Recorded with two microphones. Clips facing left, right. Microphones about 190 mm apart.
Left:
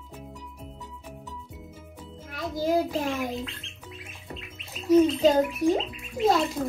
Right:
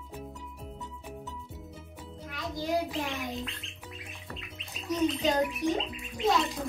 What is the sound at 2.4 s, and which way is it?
Child singing, centre (ahead or behind).